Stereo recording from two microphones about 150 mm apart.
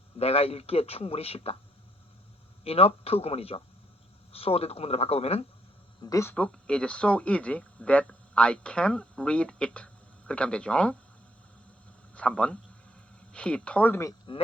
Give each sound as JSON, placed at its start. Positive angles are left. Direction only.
{"t": 0.2, "sound": "speech", "side_deg": 40}
{"t": 2.6, "sound": "speech", "side_deg": 40}
{"t": 6.0, "sound": "speech", "side_deg": 20}
{"t": 6.3, "sound": "speech", "side_deg": 5}
{"t": 12.1, "sound": "a man's voice", "side_deg": 10}